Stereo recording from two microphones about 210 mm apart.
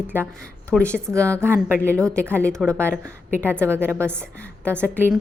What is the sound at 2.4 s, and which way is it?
A woman's voice, 5° left (ahead or behind).